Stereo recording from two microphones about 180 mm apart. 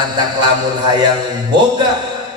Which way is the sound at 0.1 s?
25° right (ahead or behind).